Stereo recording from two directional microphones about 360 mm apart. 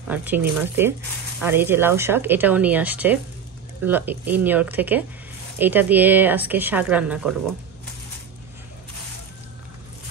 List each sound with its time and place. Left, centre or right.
0.1 s speech: centre